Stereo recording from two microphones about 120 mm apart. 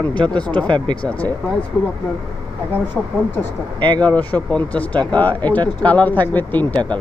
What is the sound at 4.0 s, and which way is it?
Speech, 15° left (ahead or behind).